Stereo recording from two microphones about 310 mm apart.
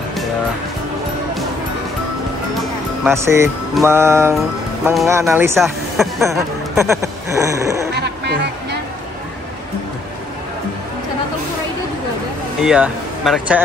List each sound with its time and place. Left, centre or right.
3.1 s music: centre
4.8 s speech: centre
7.9 s music: right
12.6 s speech: centre